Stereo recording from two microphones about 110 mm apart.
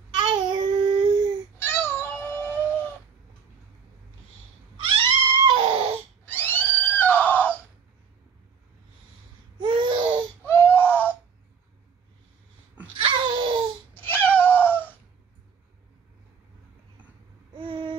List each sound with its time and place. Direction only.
0.3 s child singing: 50° right (ahead or behind)
1.6 s meow: 20° left (ahead or behind)
4.7 s crying: 50° right (ahead or behind)
6.2 s a sound: 20° left (ahead or behind)
9.6 s babbling: 45° right (ahead or behind)
10.4 s baby cry: 20° left (ahead or behind)
12.9 s a sound: 50° right (ahead or behind)
13.9 s cat: 15° left (ahead or behind)
17.6 s babbling: 45° right (ahead or behind)